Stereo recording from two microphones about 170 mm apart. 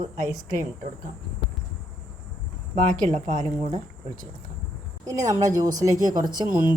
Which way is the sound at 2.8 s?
50° right (ahead or behind).